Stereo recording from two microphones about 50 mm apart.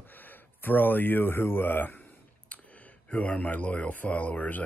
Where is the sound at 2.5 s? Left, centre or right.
Left.